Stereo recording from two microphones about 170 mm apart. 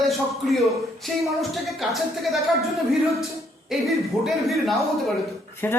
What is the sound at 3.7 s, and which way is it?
Speech, centre (ahead or behind).